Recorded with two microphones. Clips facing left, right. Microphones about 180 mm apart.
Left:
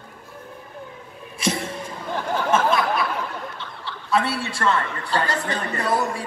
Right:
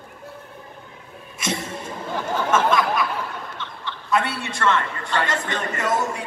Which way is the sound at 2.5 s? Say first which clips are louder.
Even; 30° left (ahead or behind).